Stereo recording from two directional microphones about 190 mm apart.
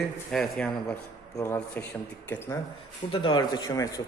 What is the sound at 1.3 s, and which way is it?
Speech, 15° left (ahead or behind).